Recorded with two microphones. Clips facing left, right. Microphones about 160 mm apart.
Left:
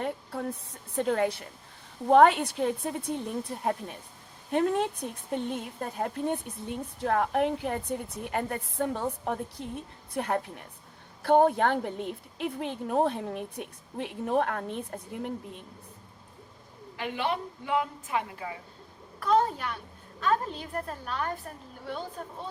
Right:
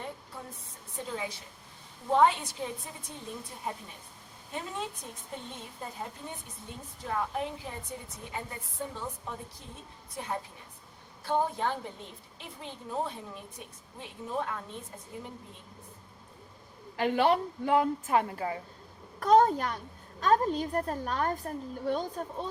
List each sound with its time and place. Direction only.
0.0 s a sound: 70° left (ahead or behind)
0.9 s a woman's voice: 65° left (ahead or behind)
17.0 s a child's voice: 40° right (ahead or behind)